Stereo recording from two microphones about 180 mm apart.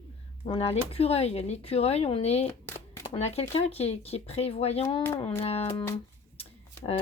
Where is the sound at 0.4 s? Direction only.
35° left (ahead or behind).